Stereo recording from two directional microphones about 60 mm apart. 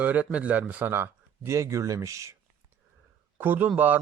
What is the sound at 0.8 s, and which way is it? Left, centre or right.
Speech, right.